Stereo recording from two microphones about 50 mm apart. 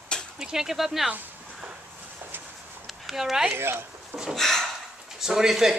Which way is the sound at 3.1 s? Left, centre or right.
Centre.